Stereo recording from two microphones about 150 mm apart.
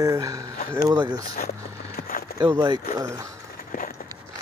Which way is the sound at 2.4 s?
25° right (ahead or behind).